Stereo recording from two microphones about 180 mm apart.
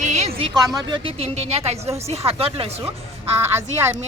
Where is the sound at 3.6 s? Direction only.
15° right (ahead or behind).